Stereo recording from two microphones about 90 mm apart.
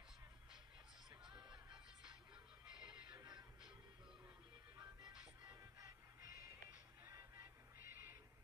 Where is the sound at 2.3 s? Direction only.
10° right (ahead or behind).